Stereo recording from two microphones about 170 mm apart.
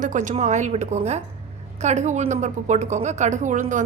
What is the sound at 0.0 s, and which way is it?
A woman's voice, 50° right (ahead or behind).